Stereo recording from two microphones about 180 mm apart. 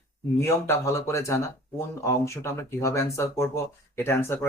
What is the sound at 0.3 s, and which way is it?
Speech, 15° left (ahead or behind).